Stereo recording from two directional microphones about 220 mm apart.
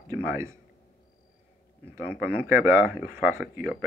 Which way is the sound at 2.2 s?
10° right (ahead or behind).